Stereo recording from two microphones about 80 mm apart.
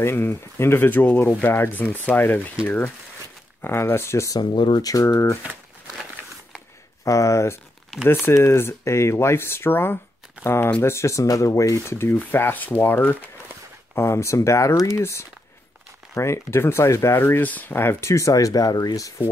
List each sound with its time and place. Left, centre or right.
0.0 s speech: left
2.6 s speech: left
4.3 s speech: left
4.8 s speech: left
7.1 s speech: left
13.9 s speech: left